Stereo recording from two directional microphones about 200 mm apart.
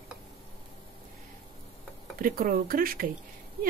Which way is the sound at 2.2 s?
45° right (ahead or behind).